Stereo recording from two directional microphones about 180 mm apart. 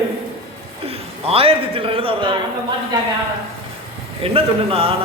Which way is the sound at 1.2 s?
30° right (ahead or behind).